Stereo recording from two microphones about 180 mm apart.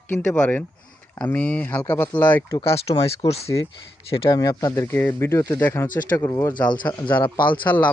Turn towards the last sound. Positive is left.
turn(degrees=10)  # may be behind; listen again after turning